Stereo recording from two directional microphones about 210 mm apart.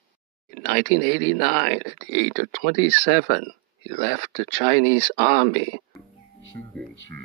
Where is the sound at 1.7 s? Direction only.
75° right (ahead or behind).